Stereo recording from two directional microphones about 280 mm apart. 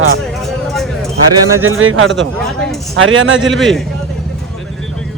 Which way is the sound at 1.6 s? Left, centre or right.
Right.